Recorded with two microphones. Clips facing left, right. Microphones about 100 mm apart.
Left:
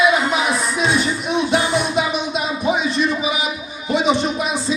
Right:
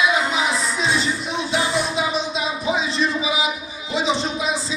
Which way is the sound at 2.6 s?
60° left (ahead or behind).